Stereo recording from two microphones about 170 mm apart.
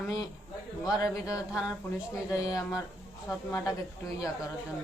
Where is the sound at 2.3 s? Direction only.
20° left (ahead or behind).